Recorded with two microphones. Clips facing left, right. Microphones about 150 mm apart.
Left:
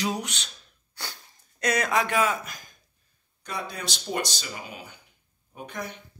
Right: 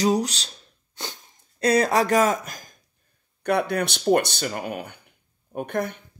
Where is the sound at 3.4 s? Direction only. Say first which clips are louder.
Right 12 dB; 65° right (ahead or behind).